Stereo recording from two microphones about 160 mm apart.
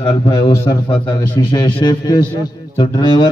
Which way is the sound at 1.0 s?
10° left (ahead or behind).